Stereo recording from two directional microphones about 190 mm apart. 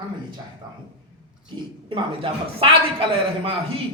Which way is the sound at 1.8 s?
25° right (ahead or behind).